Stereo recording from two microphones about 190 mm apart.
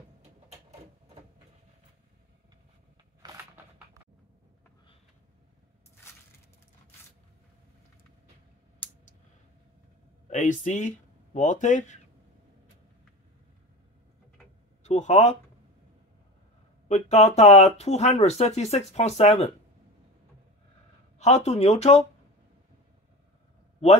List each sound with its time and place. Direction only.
6.0 s crushing: 15° left (ahead or behind)
10.3 s speech: 40° left (ahead or behind)
14.8 s a sound: 35° left (ahead or behind)
16.8 s speech: 35° left (ahead or behind)
21.2 s speech: 35° left (ahead or behind)